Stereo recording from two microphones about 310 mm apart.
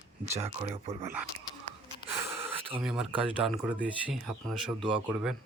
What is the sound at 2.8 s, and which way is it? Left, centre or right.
Speech, centre.